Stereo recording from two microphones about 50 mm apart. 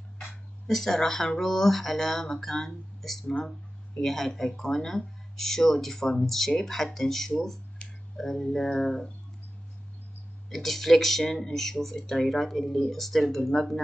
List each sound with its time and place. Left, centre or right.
0.7 s speech: centre
7.8 s a sound: left
8.2 s speech: centre
10.5 s speech: centre